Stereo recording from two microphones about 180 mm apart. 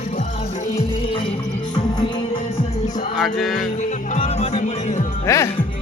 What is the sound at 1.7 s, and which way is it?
Music, 25° left (ahead or behind).